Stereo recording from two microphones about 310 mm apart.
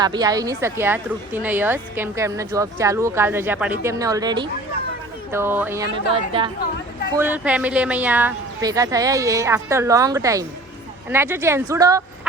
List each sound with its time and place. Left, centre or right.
0.0 s a woman's voice: centre
7.1 s a woman's voice: centre